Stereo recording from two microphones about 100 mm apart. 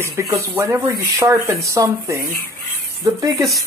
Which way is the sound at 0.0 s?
25° right (ahead or behind).